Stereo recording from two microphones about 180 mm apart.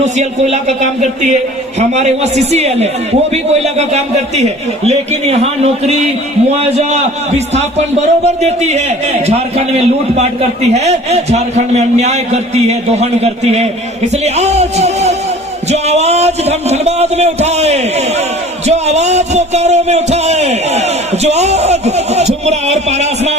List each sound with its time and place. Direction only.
0.0 s a man's voice: 40° right (ahead or behind)
15.7 s music: 35° right (ahead or behind)
18.6 s speech: 35° right (ahead or behind)
21.2 s a sound: 35° right (ahead or behind)